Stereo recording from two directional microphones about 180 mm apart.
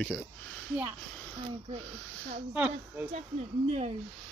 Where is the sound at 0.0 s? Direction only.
5° left (ahead or behind).